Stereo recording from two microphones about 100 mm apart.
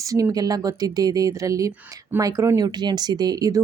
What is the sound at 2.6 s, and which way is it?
Speech, 45° right (ahead or behind).